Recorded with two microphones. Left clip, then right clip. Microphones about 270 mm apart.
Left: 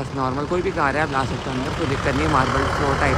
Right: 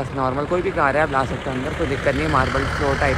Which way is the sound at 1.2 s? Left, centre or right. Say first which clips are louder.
Right 1 dB; centre.